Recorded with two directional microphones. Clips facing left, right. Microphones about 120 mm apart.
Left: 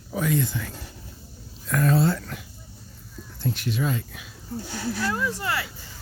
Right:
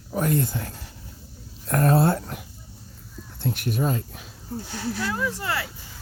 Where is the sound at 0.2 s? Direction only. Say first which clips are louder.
Right 1 dB; 50° right (ahead or behind).